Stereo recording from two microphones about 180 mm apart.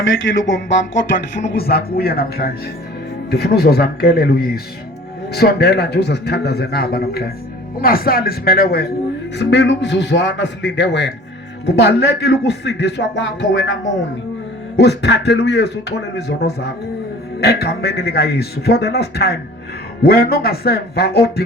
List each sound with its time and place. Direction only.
0.0 s music: 90° left
1.5 s a man's voice: 60° left (ahead or behind)
9.4 s a man's voice: 75° left (ahead or behind)
11.6 s speech: 65° left (ahead or behind); by 13.7 s 80° left
14.8 s a man's voice: 70° left (ahead or behind)